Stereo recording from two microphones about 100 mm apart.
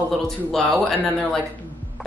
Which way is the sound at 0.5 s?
5° left (ahead or behind).